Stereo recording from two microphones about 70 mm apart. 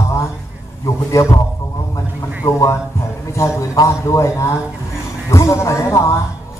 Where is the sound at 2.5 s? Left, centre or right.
Left.